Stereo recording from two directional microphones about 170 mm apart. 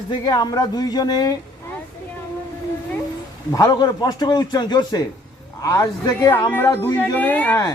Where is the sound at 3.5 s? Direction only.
20° left (ahead or behind).